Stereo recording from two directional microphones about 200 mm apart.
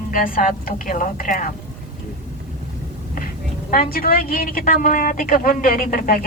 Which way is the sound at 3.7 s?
45° left (ahead or behind).